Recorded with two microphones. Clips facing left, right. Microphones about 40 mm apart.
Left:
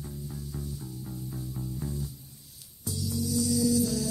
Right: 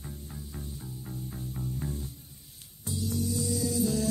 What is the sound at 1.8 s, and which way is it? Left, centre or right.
Music, right.